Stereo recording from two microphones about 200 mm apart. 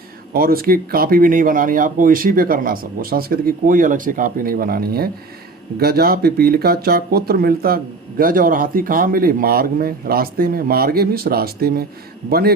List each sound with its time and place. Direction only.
0.3 s speech: 50° right (ahead or behind)